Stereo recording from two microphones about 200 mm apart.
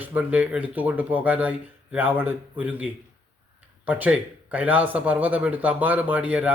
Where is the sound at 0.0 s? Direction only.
10° right (ahead or behind).